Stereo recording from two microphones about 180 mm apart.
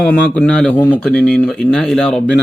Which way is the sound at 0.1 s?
5° left (ahead or behind).